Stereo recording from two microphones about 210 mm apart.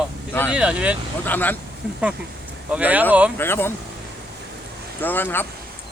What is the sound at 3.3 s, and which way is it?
Speech, 10° left (ahead or behind).